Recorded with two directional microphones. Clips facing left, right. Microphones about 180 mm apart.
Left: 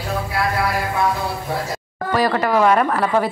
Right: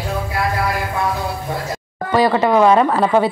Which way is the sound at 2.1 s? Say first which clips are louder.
Right 4 dB; 25° right (ahead or behind).